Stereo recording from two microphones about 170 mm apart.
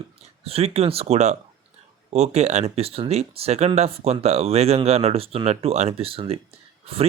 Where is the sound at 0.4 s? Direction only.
35° right (ahead or behind).